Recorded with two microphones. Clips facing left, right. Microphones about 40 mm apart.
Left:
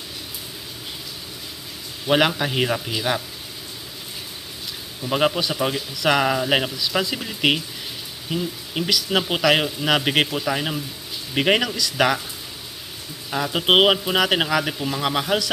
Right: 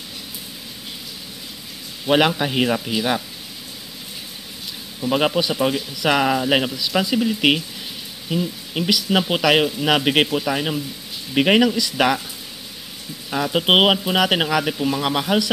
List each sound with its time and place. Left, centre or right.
2.0 s speech: centre
5.1 s speech: centre
12.0 s speech: centre
13.3 s speech: centre